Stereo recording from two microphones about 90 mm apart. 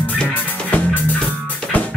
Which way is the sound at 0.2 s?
20° left (ahead or behind).